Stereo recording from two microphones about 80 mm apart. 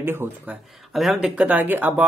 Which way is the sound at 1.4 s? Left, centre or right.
Right.